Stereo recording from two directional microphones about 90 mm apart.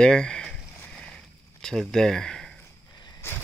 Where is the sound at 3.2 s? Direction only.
25° left (ahead or behind).